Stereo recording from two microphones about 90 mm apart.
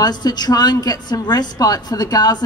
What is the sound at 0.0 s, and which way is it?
A woman's voice, 50° left (ahead or behind).